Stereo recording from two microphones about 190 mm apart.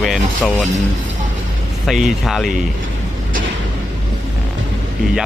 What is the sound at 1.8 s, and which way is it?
Speech, centre (ahead or behind).